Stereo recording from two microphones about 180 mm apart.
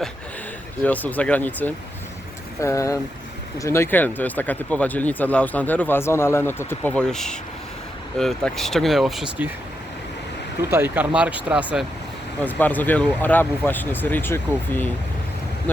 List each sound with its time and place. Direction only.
0.8 s speech: 10° left (ahead or behind)
10.6 s speech: 15° right (ahead or behind)
12.5 s speech: 10° left (ahead or behind)